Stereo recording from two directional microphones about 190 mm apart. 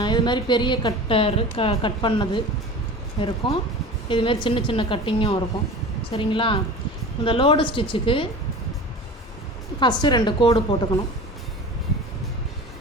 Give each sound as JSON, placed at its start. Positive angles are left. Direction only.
{"t": 0.0, "sound": "a woman's voice", "side_deg": 25}
{"t": 9.8, "sound": "a woman's voice", "side_deg": 20}